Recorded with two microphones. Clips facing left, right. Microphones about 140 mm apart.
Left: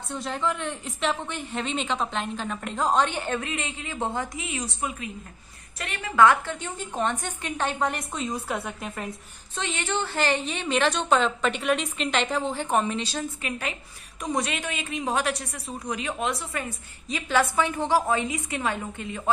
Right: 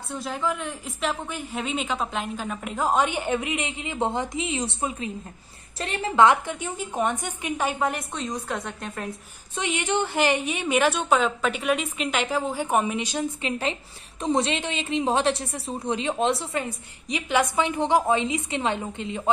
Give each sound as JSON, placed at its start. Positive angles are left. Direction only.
{"t": 0.1, "sound": "a woman's voice", "side_deg": 0}
{"t": 9.6, "sound": "a woman's voice", "side_deg": -15}